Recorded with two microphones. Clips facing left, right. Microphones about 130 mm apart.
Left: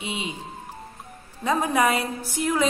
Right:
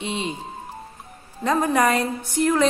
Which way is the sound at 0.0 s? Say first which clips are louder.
Right 4 dB; 10° left (ahead or behind).